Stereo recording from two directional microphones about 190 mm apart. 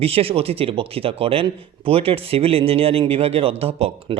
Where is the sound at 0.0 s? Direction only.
30° right (ahead or behind).